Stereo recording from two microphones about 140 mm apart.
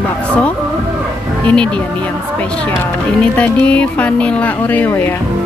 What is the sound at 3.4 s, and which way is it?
Speech, 10° left (ahead or behind).